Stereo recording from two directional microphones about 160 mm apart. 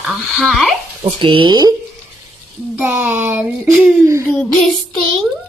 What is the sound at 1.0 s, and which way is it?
Speech, 30° right (ahead or behind).